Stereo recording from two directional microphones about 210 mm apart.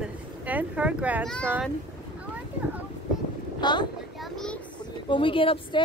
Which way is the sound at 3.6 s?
20° left (ahead or behind).